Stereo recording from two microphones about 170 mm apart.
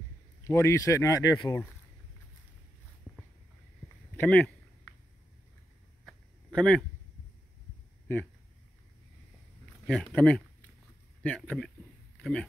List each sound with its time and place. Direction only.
0.4 s speech: 15° left (ahead or behind)
4.2 s speech: 10° left (ahead or behind)
6.0 s a sound: 5° left (ahead or behind)
9.8 s speech: 5° left (ahead or behind)